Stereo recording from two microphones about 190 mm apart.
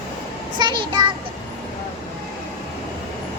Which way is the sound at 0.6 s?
25° right (ahead or behind).